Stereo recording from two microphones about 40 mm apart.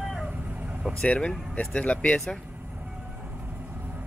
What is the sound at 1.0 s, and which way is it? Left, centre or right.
Speech, left.